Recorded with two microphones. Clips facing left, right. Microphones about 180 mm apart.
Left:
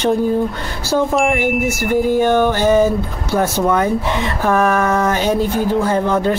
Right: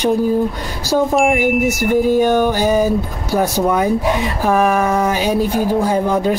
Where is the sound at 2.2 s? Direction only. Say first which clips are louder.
Even; 15° right (ahead or behind).